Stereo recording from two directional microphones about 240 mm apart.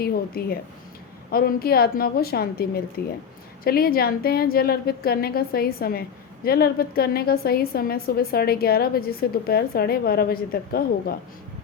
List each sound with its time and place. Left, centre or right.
0.0 s a woman's voice: left